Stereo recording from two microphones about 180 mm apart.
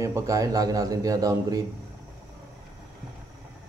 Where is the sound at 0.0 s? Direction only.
15° right (ahead or behind).